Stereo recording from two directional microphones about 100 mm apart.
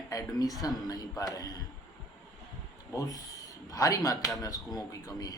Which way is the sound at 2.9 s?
35° left (ahead or behind).